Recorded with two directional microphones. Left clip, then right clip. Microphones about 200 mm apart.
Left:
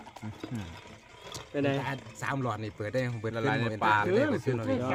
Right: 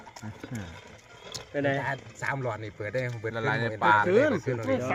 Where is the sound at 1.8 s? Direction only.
55° left (ahead or behind).